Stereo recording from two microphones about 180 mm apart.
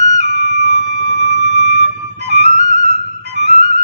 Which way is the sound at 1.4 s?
40° right (ahead or behind).